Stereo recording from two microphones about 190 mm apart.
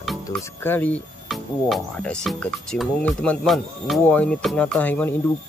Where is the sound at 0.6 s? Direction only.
10° left (ahead or behind).